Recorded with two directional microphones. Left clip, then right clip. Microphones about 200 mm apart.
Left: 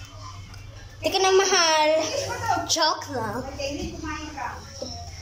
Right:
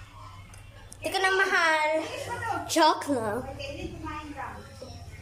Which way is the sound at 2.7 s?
15° right (ahead or behind).